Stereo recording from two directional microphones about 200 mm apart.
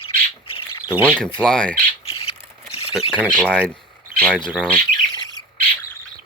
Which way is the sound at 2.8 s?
30° left (ahead or behind).